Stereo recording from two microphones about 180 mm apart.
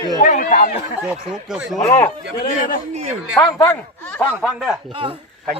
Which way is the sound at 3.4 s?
15° left (ahead or behind).